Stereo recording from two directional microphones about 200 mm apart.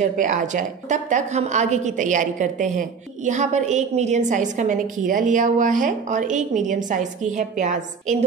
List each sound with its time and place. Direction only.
0.0 s a woman's voice: 40° right (ahead or behind)